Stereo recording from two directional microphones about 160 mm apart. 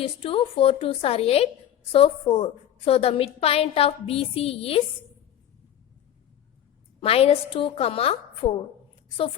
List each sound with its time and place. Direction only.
0.0 s a woman's voice: 35° left (ahead or behind)
7.0 s a woman's voice: 40° left (ahead or behind)